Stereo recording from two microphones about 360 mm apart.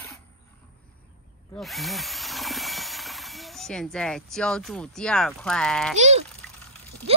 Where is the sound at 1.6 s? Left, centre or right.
Centre.